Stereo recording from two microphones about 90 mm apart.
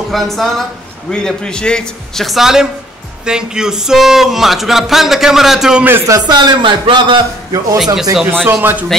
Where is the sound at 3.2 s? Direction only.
10° right (ahead or behind).